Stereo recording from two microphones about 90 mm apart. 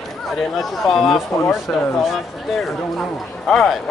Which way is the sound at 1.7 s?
15° left (ahead or behind).